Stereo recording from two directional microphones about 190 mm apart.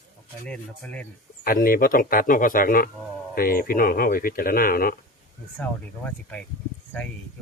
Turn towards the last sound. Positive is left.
turn(degrees=5)  # may be behind; listen again after turning